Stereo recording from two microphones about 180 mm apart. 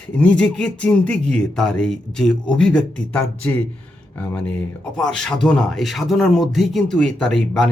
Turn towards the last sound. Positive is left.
turn(degrees=5)  # may be behind; listen again after turning